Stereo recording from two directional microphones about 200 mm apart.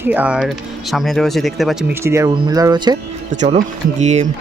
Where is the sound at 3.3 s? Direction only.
35° right (ahead or behind).